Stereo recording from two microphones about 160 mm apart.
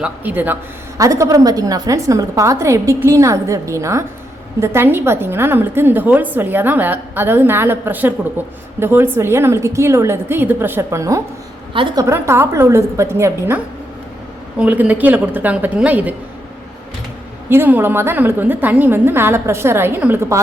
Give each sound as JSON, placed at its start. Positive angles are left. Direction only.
{"t": 0.0, "sound": "a woman's voice", "side_deg": -10}
{"t": 11.7, "sound": "a woman's voice", "side_deg": -30}
{"t": 12.0, "sound": "a woman's voice", "side_deg": -15}
{"t": 14.6, "sound": "a woman's voice", "side_deg": -10}
{"t": 17.5, "sound": "a woman's voice", "side_deg": -15}